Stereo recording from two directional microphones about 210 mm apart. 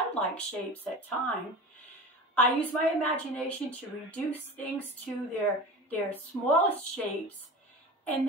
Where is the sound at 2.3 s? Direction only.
10° left (ahead or behind).